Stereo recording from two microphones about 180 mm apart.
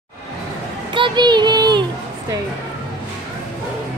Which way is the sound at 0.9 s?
25° right (ahead or behind).